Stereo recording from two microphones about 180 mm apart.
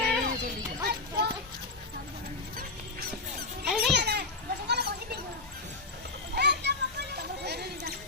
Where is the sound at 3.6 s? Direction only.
Centre (ahead or behind).